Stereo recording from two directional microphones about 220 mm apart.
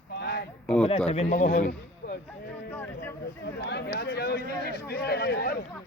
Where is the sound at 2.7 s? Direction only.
10° left (ahead or behind).